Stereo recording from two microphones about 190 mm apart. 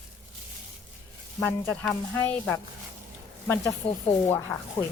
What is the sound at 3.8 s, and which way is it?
Speech, 30° left (ahead or behind).